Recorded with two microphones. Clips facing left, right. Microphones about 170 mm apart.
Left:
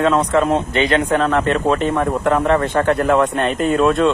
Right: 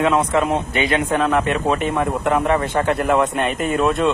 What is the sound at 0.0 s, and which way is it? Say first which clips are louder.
Speech: left 2 dB; 15° right (ahead or behind).